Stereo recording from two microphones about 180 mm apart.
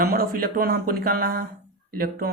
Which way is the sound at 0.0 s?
55° right (ahead or behind).